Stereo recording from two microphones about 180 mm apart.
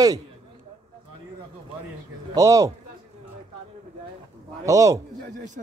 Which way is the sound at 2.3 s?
15° right (ahead or behind).